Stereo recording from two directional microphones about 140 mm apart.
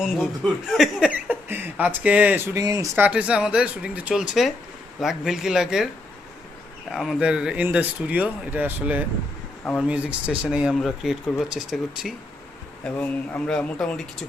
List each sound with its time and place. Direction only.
0.7 s speech: centre (ahead or behind)
1.1 s speech: 15° right (ahead or behind)
2.6 s speech: 25° right (ahead or behind)
3.0 s speech: 10° right (ahead or behind)
6.9 s speech: centre (ahead or behind)